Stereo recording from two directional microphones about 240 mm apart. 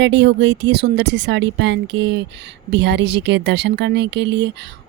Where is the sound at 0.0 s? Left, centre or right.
Right.